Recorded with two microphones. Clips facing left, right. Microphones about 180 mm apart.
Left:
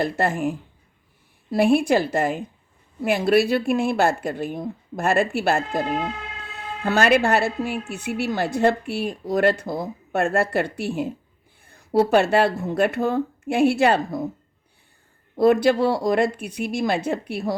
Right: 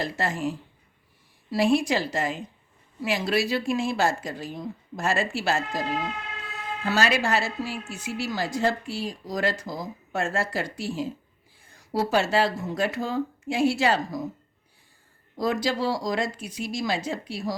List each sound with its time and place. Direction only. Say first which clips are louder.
0.0 s a woman's voice: left 5 dB; 55° left (ahead or behind)
15.4 s a woman's voice: left 9 dB; 60° left (ahead or behind)